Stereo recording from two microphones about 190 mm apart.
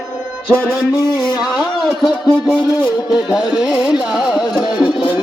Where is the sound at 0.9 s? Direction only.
20° left (ahead or behind).